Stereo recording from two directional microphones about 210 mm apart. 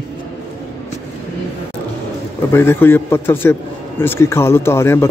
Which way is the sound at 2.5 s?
10° left (ahead or behind).